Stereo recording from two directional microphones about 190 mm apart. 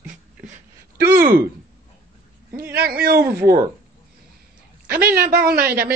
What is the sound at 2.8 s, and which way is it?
Speech, 55° right (ahead or behind).